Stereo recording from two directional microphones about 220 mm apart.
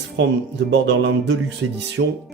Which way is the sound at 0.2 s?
55° right (ahead or behind).